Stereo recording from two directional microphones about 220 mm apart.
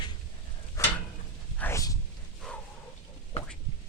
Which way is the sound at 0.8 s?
15° left (ahead or behind).